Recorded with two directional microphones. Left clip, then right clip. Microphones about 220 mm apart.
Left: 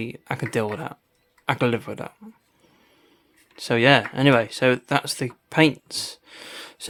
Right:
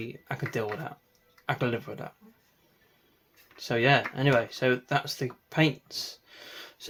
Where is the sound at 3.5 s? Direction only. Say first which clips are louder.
Left 7 dB; 45° left (ahead or behind).